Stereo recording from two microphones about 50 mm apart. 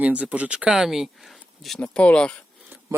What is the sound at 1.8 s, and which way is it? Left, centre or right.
Speech, left.